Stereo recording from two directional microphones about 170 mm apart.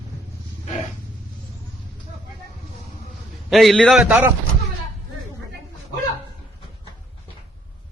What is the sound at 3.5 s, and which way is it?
Speech, centre (ahead or behind).